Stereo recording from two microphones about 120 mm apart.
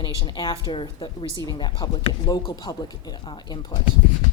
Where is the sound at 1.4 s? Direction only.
35° left (ahead or behind).